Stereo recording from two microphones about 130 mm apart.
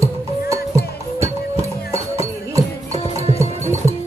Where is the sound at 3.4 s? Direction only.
20° right (ahead or behind).